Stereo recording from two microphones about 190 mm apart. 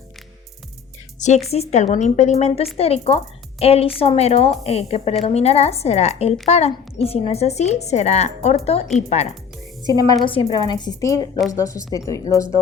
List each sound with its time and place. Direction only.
1.5 s speech: 35° left (ahead or behind)
9.8 s a woman's voice: 20° right (ahead or behind)
10.2 s a woman's voice: 30° left (ahead or behind)